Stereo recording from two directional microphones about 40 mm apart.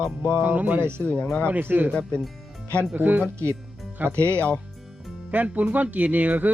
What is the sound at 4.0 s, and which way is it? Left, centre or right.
Speech, right.